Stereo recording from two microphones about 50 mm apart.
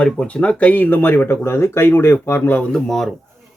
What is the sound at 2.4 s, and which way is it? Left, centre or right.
Speech, left.